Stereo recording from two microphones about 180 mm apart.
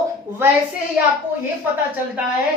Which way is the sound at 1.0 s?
10° right (ahead or behind).